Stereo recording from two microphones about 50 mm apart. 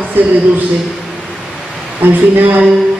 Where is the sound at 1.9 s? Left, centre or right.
Right.